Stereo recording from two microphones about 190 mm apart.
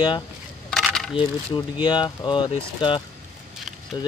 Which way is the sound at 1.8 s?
25° left (ahead or behind).